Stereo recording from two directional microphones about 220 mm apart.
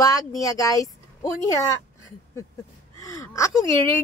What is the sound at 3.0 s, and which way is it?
Speech, 15° left (ahead or behind).